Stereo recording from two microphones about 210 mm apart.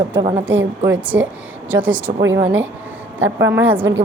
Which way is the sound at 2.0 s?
70° right (ahead or behind).